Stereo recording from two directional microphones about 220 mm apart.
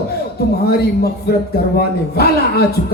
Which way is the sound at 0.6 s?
45° left (ahead or behind).